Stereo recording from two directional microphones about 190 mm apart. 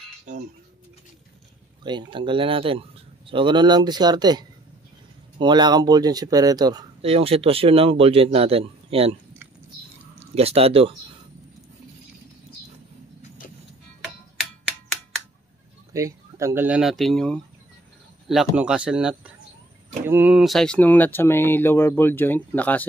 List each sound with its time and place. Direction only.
1.8 s speech: 25° right (ahead or behind)
7.0 s speech: 30° right (ahead or behind)
10.1 s speech: 30° right (ahead or behind)
15.9 s speech: 15° right (ahead or behind); by 22.8 s 10° left (ahead or behind)